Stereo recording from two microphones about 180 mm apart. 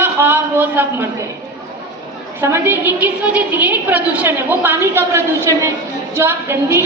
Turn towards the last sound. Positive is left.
turn(degrees=-15)  # may be behind; listen again after turning